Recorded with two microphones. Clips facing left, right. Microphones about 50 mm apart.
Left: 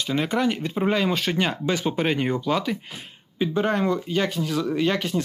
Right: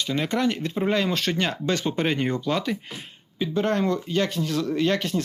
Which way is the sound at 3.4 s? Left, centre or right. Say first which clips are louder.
Left 1 dB; centre.